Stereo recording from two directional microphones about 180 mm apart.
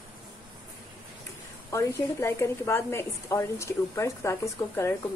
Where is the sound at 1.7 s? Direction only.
15° left (ahead or behind).